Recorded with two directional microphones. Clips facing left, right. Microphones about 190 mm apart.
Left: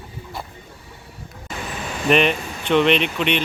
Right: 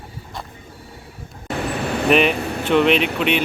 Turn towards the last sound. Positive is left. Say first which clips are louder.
# right 2 dB
turn(degrees=-5)  # may be behind; listen again after turning